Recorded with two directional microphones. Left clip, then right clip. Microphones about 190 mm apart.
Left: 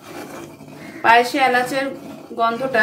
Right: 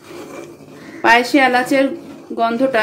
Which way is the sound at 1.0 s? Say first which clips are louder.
Right 2 dB; 40° right (ahead or behind).